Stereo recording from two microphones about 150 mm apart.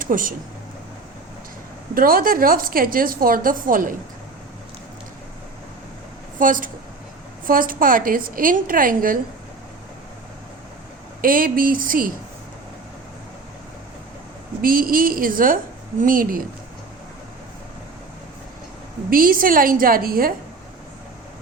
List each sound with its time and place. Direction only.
0.0 s speech: 65° right (ahead or behind)
2.0 s a woman's voice: 70° right (ahead or behind)
6.4 s a woman's voice: 65° right (ahead or behind)
11.2 s a woman's voice: 70° right (ahead or behind)
14.6 s a woman's voice: 70° right (ahead or behind)
19.1 s a woman's voice: 70° right (ahead or behind)